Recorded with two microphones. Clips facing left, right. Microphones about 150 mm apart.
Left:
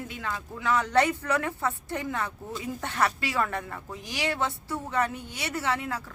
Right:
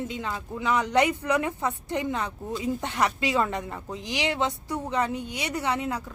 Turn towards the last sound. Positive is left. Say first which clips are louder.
# right 2 dB
turn(degrees=-20)  # may be behind; listen again after turning